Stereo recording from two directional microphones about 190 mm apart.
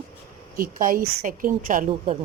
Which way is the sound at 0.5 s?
45° right (ahead or behind).